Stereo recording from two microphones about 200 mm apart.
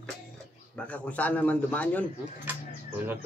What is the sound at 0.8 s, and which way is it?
A man's voice, 5° left (ahead or behind).